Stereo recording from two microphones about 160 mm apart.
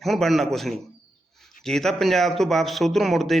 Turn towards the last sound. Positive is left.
turn(degrees=0)  # may be behind; listen again after turning